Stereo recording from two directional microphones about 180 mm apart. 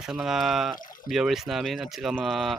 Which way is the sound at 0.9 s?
50° left (ahead or behind).